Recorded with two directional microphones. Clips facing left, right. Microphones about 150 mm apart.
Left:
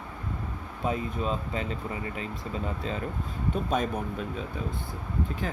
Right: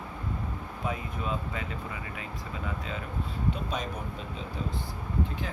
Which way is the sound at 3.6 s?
50° left (ahead or behind).